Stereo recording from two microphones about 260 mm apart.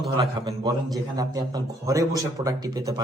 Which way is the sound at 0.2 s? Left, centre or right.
Centre.